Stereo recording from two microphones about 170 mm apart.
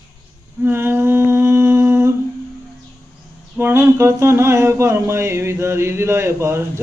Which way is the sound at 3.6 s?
15° right (ahead or behind).